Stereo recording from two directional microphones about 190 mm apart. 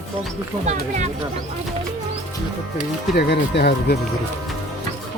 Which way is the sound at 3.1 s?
60° left (ahead or behind).